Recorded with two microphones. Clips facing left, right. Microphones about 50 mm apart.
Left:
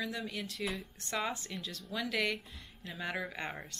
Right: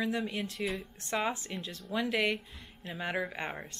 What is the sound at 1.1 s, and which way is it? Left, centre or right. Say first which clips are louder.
Speech: right 4 dB; right.